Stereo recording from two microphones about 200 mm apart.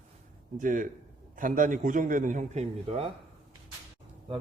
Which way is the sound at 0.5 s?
40° right (ahead or behind).